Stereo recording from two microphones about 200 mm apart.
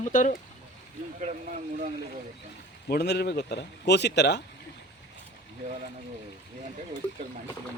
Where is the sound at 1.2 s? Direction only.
40° right (ahead or behind).